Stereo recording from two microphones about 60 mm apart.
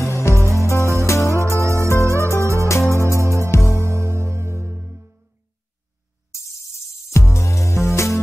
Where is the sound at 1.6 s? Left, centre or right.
Right.